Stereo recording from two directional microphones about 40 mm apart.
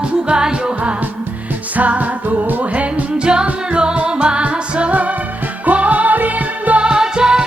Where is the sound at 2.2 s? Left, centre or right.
Right.